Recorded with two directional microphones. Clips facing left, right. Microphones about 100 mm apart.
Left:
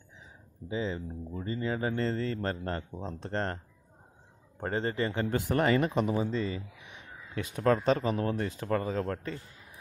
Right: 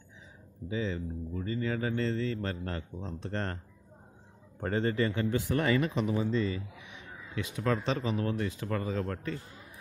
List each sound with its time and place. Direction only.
0.7 s speech: 30° left (ahead or behind)
4.6 s speech: 30° left (ahead or behind)
6.3 s speech: 25° left (ahead or behind)
6.9 s speech: 40° left (ahead or behind)